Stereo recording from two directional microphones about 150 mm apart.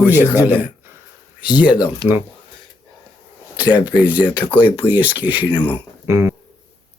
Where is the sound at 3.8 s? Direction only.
10° right (ahead or behind).